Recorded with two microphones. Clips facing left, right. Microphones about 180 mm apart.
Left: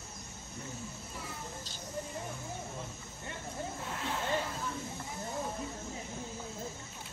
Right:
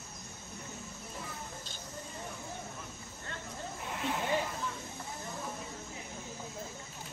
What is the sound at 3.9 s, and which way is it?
Snake, 15° right (ahead or behind).